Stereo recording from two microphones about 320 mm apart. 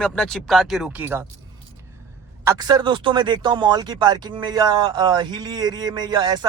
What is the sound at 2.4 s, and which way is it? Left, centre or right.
Speech, centre.